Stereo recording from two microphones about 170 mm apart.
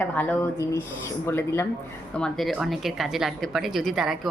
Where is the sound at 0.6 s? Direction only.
20° left (ahead or behind).